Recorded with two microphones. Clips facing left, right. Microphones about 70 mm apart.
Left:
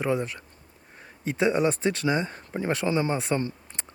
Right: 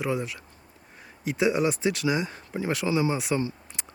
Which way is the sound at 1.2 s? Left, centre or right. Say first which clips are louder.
Left 1 dB; centre.